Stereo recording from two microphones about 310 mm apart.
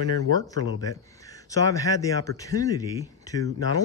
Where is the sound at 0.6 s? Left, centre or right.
Left.